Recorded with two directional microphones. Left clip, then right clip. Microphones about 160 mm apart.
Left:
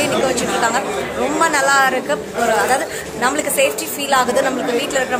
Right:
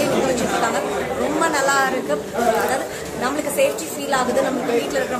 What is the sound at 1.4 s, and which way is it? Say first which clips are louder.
Speech: left 5 dB; 10° left (ahead or behind).